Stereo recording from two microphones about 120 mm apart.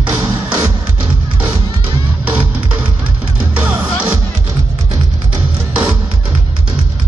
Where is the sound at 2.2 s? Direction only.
10° right (ahead or behind).